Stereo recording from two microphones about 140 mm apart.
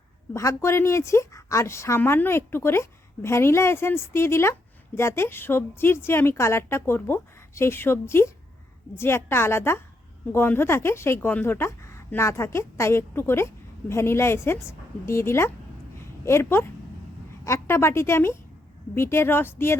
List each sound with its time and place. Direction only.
0.3 s a woman's voice: 20° left (ahead or behind)